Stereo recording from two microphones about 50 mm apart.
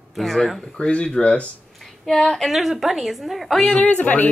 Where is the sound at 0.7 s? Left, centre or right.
Left.